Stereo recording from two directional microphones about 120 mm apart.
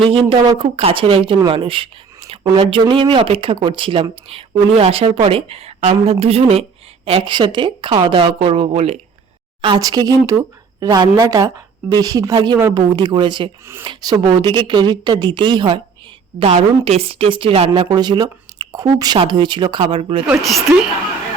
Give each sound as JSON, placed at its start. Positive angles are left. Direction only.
{"t": 0.1, "sound": "speech", "side_deg": -50}
{"t": 9.6, "sound": "a woman's voice", "side_deg": -45}
{"t": 9.8, "sound": "a woman's voice", "side_deg": -30}
{"t": 16.4, "sound": "speech", "side_deg": -60}
{"t": 20.2, "sound": "speech", "side_deg": 0}